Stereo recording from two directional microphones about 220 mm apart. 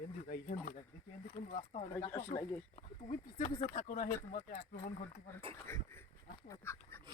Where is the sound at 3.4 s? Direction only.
35° left (ahead or behind).